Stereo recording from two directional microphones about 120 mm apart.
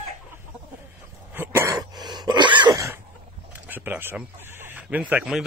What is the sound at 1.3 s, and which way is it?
Throat clearing, 20° right (ahead or behind).